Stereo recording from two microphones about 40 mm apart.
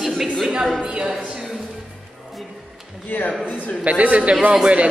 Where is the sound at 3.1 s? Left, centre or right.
Left.